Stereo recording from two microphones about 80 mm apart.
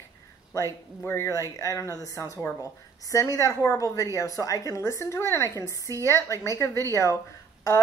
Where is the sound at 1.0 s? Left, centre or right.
Left.